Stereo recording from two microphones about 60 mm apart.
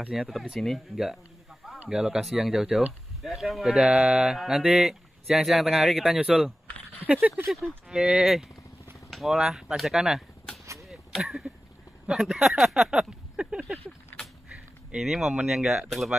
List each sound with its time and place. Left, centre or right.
0.1 s speech: centre
1.9 s speech: centre
7.2 s speech: right
7.9 s speech: centre
10.6 s a sound: right
10.9 s a sound: centre
12.1 s speech: centre
15.0 s speech: centre